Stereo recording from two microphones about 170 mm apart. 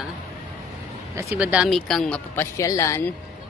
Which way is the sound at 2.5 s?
20° left (ahead or behind).